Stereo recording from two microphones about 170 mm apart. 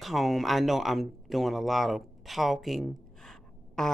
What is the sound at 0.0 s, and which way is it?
Speech, centre (ahead or behind).